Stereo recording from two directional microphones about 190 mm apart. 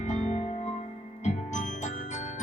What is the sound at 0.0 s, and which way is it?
Music, 35° left (ahead or behind).